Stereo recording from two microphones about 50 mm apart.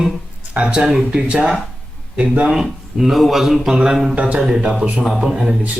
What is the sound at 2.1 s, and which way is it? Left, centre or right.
Speech, right.